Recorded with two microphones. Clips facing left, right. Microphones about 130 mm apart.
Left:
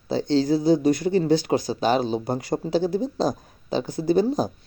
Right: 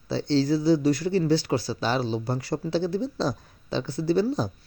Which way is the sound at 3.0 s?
50° left (ahead or behind).